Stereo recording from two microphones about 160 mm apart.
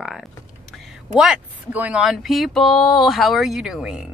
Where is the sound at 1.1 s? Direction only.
5° right (ahead or behind).